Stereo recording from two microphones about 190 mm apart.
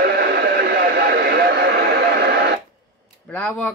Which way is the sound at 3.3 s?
5° left (ahead or behind).